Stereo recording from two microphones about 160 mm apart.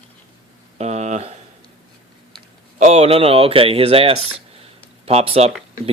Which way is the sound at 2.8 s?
40° right (ahead or behind).